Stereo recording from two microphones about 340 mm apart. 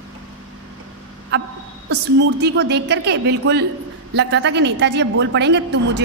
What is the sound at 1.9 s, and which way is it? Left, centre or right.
A woman's voice, right.